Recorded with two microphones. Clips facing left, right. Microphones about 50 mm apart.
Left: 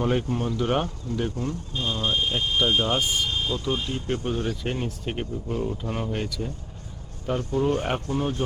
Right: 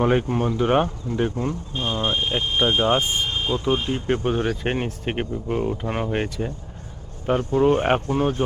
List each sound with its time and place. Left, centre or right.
0.0 s speech: right